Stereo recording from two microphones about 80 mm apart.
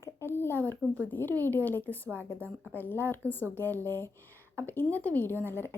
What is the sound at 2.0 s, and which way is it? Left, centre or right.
Speech, right.